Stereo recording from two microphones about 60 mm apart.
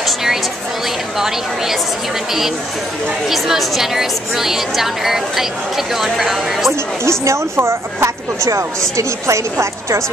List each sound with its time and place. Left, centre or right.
0.0 s a sound: centre
1.1 s a woman's voice: centre
3.3 s a woman's voice: centre
7.1 s a woman's voice: right